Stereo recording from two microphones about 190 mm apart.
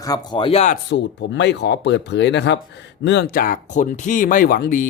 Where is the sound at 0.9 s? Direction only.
70° left (ahead or behind).